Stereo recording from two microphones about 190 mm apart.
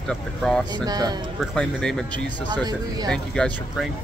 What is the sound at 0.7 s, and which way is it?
Speech, 20° right (ahead or behind).